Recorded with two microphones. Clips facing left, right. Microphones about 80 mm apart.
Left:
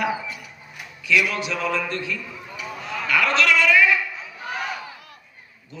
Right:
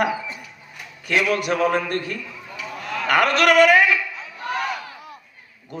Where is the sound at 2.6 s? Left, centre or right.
Centre.